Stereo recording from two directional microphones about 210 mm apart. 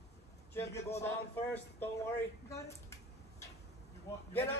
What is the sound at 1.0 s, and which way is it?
Speech, 10° left (ahead or behind).